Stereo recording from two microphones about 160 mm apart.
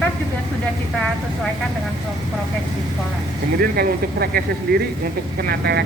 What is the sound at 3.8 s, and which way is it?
Speech, 70° right (ahead or behind).